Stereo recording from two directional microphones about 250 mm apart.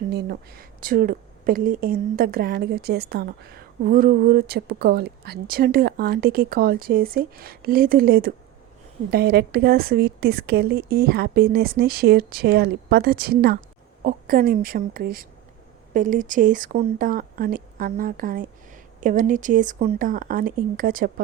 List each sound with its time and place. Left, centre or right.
0.1 s speech: right